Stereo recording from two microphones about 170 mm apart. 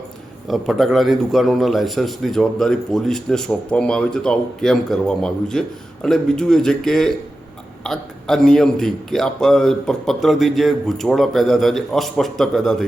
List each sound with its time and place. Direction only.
0.4 s a man's voice: centre (ahead or behind)